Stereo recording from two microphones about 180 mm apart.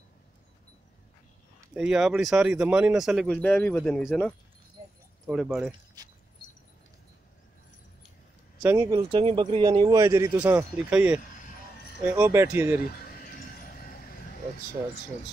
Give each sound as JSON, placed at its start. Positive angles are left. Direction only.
{"t": 1.7, "sound": "speech", "side_deg": -5}
{"t": 8.6, "sound": "speech", "side_deg": -20}
{"t": 13.0, "sound": "horse", "side_deg": 50}